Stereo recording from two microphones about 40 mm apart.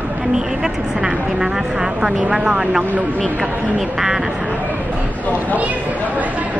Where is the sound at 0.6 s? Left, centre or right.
Centre.